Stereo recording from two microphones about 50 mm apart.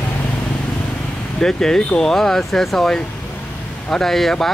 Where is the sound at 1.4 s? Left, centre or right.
Centre.